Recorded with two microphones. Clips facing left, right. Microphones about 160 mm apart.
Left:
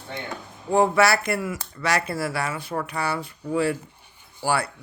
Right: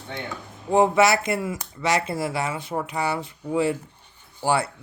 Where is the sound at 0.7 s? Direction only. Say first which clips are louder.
Right 1 dB; 20° right (ahead or behind).